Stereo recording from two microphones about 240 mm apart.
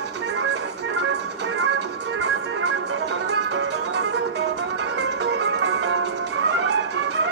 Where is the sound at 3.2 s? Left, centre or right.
Right.